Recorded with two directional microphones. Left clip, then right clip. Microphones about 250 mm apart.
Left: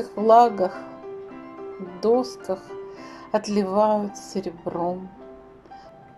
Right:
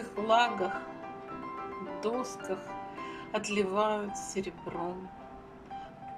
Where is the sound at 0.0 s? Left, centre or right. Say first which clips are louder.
Left 11 dB; centre.